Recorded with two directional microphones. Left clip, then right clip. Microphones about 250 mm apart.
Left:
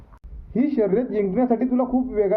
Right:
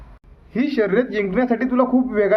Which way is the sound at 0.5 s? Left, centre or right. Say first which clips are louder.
Right 2 dB; centre.